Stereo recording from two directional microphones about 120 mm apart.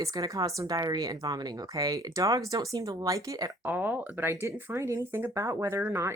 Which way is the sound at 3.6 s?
15° right (ahead or behind).